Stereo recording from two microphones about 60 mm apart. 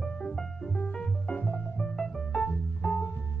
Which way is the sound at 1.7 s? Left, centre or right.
Centre.